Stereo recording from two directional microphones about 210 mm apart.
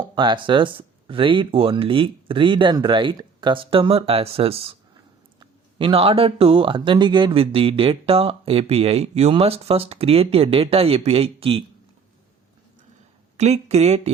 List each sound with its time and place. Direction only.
0.2 s speech: 20° right (ahead or behind)
13.3 s speech: 30° right (ahead or behind)